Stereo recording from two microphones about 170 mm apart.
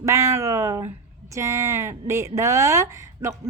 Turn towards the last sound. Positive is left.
turn(degrees=-15)  # may be behind; listen again after turning